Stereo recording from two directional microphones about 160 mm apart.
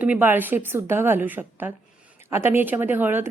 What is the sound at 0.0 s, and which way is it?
A woman's voice, 10° right (ahead or behind).